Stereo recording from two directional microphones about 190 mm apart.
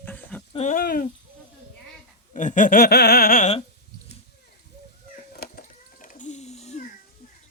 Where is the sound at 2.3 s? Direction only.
40° left (ahead or behind).